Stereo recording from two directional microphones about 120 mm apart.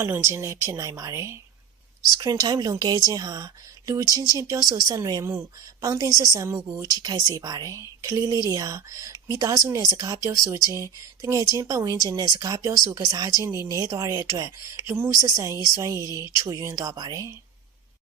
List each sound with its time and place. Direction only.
0.0 s a woman's voice: 20° right (ahead or behind)
16.0 s speech: 35° left (ahead or behind)
16.4 s a woman's voice: 30° right (ahead or behind)